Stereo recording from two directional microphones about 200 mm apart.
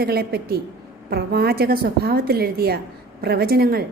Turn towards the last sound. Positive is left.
turn(degrees=-50)  # may be behind; listen again after turning